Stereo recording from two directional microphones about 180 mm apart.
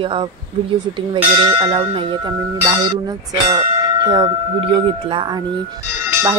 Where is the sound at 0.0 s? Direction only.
30° right (ahead or behind).